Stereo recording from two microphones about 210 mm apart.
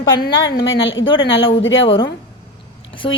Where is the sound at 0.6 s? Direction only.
65° left (ahead or behind).